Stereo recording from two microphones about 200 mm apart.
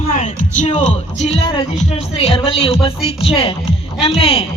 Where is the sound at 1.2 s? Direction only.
30° left (ahead or behind).